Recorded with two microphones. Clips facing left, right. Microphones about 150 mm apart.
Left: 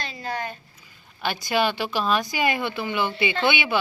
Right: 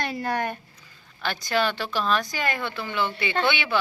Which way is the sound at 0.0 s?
60° right (ahead or behind).